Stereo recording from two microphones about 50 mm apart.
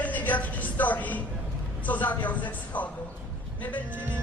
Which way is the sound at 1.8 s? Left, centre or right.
Left.